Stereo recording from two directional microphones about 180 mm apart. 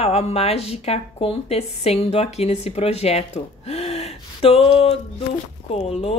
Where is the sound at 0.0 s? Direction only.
35° left (ahead or behind).